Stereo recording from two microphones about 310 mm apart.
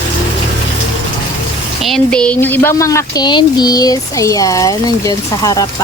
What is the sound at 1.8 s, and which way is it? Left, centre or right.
Speech, centre.